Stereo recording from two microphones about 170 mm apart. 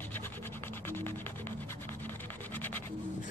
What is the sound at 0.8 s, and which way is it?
Music, 15° left (ahead or behind).